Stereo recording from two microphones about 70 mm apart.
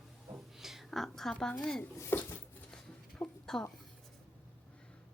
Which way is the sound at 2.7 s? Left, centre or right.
Centre.